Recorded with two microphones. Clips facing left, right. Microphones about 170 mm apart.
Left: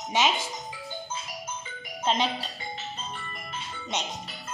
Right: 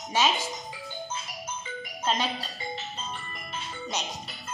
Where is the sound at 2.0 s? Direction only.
20° left (ahead or behind).